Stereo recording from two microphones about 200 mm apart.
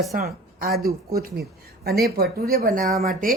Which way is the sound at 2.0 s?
50° right (ahead or behind).